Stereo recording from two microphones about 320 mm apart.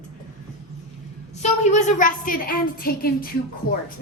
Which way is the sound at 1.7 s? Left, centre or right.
Left.